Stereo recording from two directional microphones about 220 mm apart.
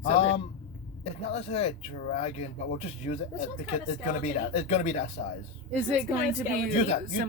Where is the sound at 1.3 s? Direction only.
25° left (ahead or behind).